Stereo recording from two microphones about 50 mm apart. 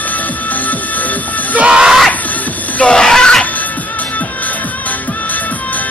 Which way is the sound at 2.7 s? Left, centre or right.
Centre.